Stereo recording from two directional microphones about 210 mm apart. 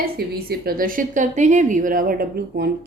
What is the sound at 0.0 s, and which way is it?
A woman's voice, 45° right (ahead or behind).